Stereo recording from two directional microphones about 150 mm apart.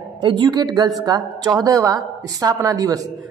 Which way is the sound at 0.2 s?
30° right (ahead or behind).